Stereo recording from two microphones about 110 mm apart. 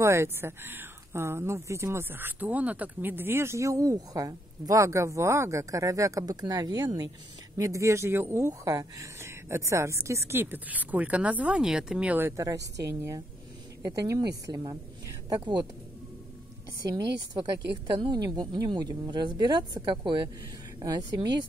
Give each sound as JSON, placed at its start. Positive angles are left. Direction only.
{"t": 0.0, "sound": "a woman's voice", "side_deg": -25}
{"t": 16.8, "sound": "a woman's voice", "side_deg": -40}